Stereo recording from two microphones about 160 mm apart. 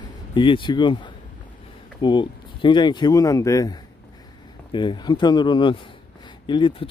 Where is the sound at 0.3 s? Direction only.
30° left (ahead or behind).